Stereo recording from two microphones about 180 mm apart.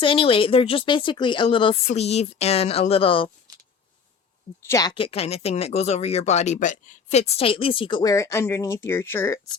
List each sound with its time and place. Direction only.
0.0 s a woman's voice: 30° left (ahead or behind)
4.6 s speech: 20° left (ahead or behind)